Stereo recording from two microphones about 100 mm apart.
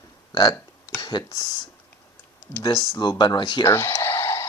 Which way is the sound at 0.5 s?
30° left (ahead or behind).